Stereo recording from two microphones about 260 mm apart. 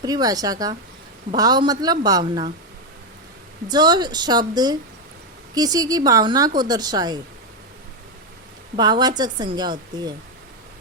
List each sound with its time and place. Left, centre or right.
0.0 s a woman's voice: centre
3.7 s a woman's voice: centre
8.7 s a woman's voice: centre